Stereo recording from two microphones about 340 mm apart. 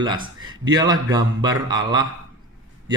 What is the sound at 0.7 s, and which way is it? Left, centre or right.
Speech, centre.